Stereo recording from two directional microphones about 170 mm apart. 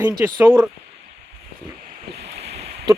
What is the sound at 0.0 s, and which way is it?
Speech, 20° right (ahead or behind).